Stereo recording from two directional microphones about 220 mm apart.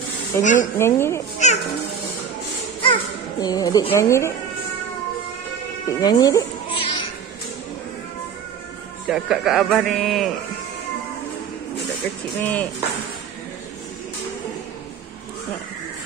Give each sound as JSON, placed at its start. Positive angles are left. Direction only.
{"t": 0.4, "sound": "speech", "side_deg": 35}
{"t": 0.7, "sound": "speech", "side_deg": 10}
{"t": 1.4, "sound": "music", "side_deg": 30}
{"t": 2.8, "sound": "speech", "side_deg": 20}
{"t": 5.9, "sound": "speech", "side_deg": 20}
{"t": 9.1, "sound": "speech", "side_deg": 0}
{"t": 11.8, "sound": "speech", "side_deg": 5}